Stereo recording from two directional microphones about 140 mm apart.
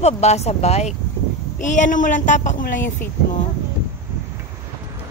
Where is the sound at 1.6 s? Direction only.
60° left (ahead or behind).